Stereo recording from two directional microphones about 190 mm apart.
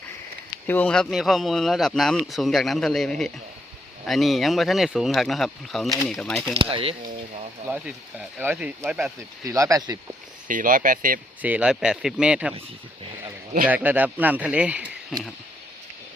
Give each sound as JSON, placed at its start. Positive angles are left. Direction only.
{"t": 0.7, "sound": "speech", "side_deg": 5}
{"t": 6.5, "sound": "speech", "side_deg": -30}
{"t": 7.7, "sound": "speech", "side_deg": -10}
{"t": 10.5, "sound": "speech", "side_deg": -45}
{"t": 11.4, "sound": "speech", "side_deg": -5}
{"t": 13.7, "sound": "speech", "side_deg": -10}